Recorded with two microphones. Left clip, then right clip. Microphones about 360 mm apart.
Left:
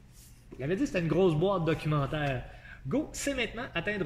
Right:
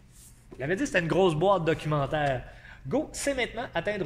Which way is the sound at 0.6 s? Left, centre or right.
Right.